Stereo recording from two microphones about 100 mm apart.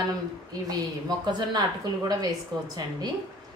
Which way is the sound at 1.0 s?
45° right (ahead or behind).